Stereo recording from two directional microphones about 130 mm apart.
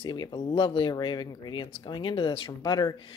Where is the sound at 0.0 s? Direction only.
35° left (ahead or behind).